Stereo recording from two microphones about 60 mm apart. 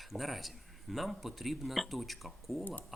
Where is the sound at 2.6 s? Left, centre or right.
Left.